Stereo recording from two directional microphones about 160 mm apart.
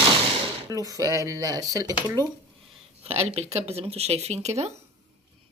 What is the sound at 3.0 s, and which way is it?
Speech, 40° right (ahead or behind).